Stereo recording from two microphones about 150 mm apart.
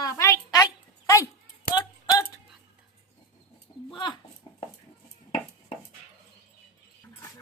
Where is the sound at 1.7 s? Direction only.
25° left (ahead or behind).